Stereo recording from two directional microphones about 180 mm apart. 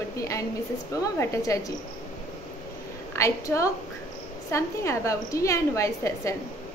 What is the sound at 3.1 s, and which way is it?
A woman's voice, 15° left (ahead or behind).